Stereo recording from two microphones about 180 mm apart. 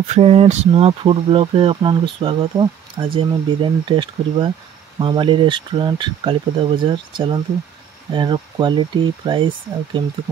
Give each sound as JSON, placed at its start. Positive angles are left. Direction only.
{"t": 0.0, "sound": "speech", "side_deg": -35}